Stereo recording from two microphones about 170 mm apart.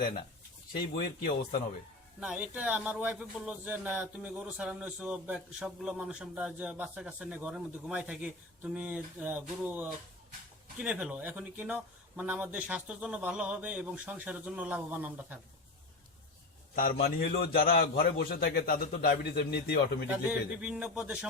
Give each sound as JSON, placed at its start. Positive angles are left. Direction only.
{"t": 0.9, "sound": "a man's voice", "side_deg": 60}
{"t": 2.2, "sound": "speech", "side_deg": -10}
{"t": 16.7, "sound": "a man's voice", "side_deg": 60}
{"t": 20.6, "sound": "speech", "side_deg": -10}